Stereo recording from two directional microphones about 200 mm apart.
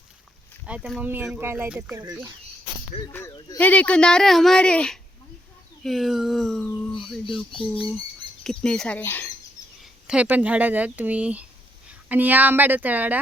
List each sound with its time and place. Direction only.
0.6 s speech: 5° right (ahead or behind)
2.9 s speech: 30° left (ahead or behind)
3.6 s speech: 5° left (ahead or behind)
8.4 s speech: 5° left (ahead or behind)
9.8 s speech: 5° right (ahead or behind)